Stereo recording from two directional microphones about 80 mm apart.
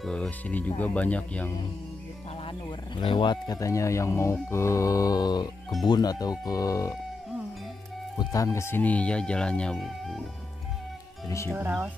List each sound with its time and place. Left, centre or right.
0.0 s speech: centre
0.5 s speech: left
3.0 s speech: left
3.5 s speech: left
8.2 s speech: left
8.5 s speech: left
8.8 s speech: centre
9.8 s speech: centre
11.5 s speech: right